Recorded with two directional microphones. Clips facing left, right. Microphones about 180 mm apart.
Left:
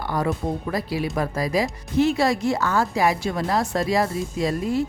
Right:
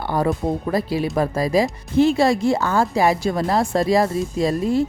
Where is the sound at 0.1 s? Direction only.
30° right (ahead or behind).